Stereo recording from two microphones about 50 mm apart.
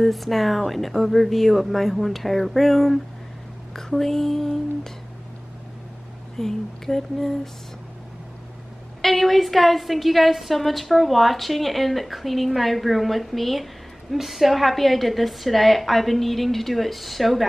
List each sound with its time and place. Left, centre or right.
0.0 s a woman's voice: centre
6.3 s speech: centre
9.0 s a woman's voice: centre